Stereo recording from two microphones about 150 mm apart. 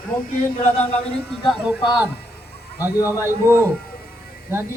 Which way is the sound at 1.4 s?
5° right (ahead or behind).